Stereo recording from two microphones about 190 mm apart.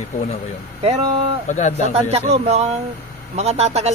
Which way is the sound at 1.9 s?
35° right (ahead or behind).